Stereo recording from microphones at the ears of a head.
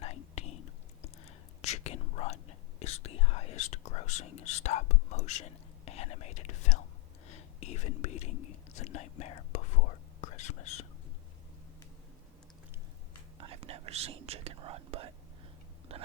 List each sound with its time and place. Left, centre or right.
0.0 s whispering: left
13.4 s whispering: right